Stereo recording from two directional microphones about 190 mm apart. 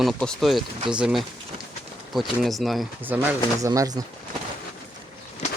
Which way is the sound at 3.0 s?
10° right (ahead or behind).